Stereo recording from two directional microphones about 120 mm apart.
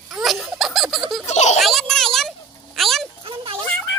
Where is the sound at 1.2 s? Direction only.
70° left (ahead or behind).